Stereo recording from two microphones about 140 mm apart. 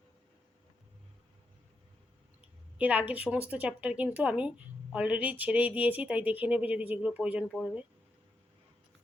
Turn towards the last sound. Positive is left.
turn(degrees=-5)  # may be behind; listen again after turning